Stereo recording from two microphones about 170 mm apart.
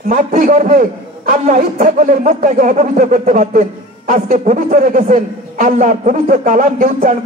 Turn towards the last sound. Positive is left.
turn(degrees=-55)  # may be behind; listen again after turning